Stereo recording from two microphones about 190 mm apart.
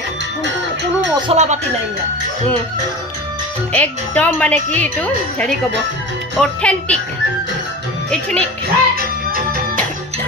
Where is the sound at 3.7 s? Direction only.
10° left (ahead or behind).